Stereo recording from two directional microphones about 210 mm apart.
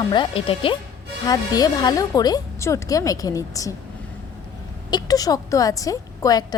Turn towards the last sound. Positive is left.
turn(degrees=15)  # may be behind; listen again after turning